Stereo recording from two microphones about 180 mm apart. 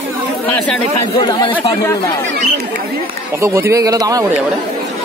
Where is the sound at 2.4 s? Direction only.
50° right (ahead or behind).